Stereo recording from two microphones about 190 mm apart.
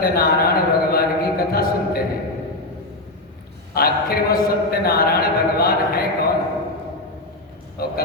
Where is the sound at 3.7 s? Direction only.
50° left (ahead or behind).